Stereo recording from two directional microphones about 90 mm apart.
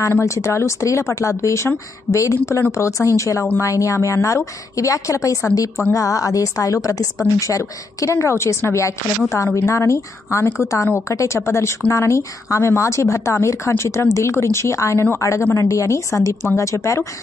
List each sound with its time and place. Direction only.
0.0 s a woman's voice: 35° left (ahead or behind)